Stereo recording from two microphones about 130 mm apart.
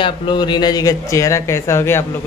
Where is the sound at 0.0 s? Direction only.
40° left (ahead or behind); by 2.0 s 20° left (ahead or behind).